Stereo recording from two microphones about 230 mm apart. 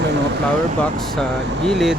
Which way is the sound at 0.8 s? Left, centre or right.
Centre.